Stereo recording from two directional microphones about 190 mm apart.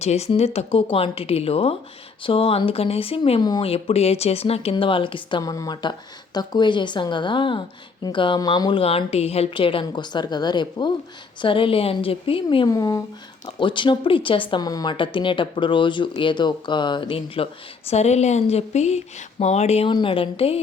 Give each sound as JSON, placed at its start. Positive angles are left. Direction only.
{"t": 0.0, "sound": "speech", "side_deg": 35}